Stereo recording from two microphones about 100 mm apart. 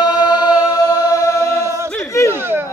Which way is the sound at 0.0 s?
45° left (ahead or behind).